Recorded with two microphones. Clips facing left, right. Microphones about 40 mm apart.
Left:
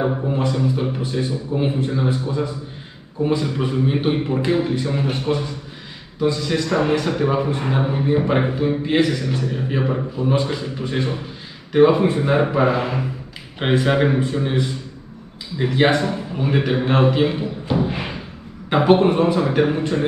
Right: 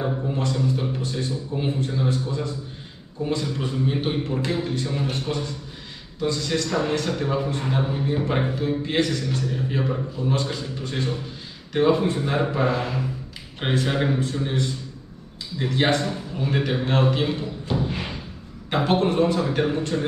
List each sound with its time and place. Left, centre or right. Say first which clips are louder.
0.3 s a man's voice: left 4 dB; centre